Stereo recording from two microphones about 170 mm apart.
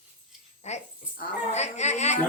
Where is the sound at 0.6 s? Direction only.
40° left (ahead or behind).